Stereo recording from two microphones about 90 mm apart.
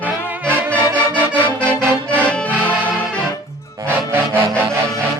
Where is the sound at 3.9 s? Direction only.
25° right (ahead or behind).